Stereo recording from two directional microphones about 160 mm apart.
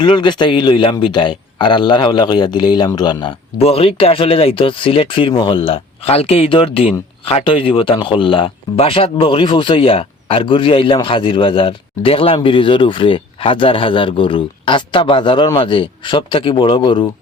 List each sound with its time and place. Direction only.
0.0 s speech: 30° left (ahead or behind)
3.6 s speech: 35° left (ahead or behind)